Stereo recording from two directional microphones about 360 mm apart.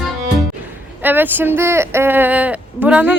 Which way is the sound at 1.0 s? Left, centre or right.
Centre.